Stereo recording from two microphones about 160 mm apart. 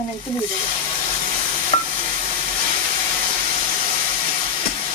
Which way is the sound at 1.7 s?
40° left (ahead or behind).